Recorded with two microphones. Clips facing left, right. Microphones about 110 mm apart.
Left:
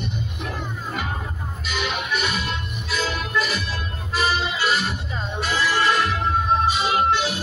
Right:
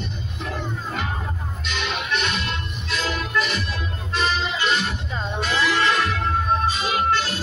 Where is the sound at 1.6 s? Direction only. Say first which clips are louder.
Left 1 dB; 5° left (ahead or behind).